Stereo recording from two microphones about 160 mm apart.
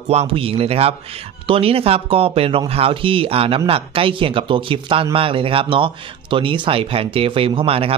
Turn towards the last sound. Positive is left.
turn(degrees=-35)  # may be behind; listen again after turning